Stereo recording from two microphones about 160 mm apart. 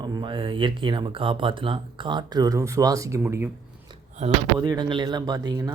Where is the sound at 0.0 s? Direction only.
30° right (ahead or behind).